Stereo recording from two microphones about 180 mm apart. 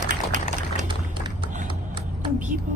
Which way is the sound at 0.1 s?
45° right (ahead or behind).